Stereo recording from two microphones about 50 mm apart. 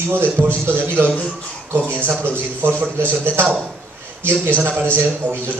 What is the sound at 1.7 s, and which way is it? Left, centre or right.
A man's voice, right.